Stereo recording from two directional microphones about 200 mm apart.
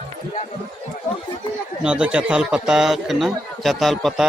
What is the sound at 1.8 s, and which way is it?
Speech, 5° right (ahead or behind).